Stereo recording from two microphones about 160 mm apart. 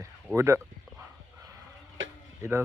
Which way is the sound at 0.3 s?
15° right (ahead or behind).